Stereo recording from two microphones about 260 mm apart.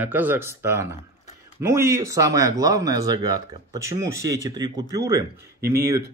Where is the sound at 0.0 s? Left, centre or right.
Centre.